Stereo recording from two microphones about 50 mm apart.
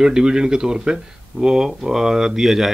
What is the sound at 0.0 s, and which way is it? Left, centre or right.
Speech, centre.